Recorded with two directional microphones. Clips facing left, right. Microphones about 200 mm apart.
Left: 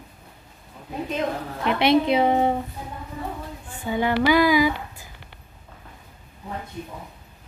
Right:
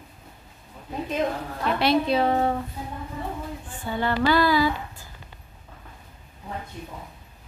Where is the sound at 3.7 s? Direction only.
15° left (ahead or behind).